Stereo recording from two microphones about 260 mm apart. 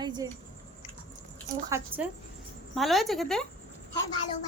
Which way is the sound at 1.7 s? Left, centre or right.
Centre.